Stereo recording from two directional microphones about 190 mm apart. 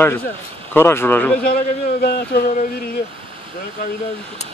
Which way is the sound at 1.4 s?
50° left (ahead or behind).